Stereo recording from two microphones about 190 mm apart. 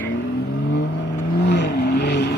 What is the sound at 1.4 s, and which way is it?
Vehicle, 65° left (ahead or behind).